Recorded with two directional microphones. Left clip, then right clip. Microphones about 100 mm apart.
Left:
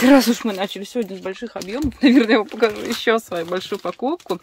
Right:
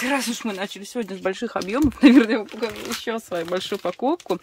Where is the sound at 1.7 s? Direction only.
30° right (ahead or behind).